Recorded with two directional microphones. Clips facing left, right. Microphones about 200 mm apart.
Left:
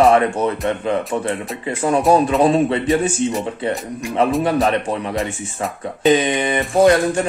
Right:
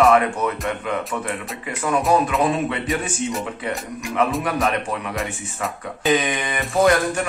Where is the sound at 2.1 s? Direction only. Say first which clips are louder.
Left 6 dB; 30° left (ahead or behind).